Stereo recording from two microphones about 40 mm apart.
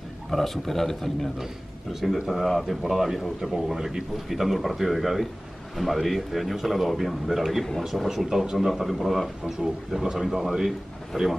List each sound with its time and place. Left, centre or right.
0.3 s speech: centre
1.4 s speech: centre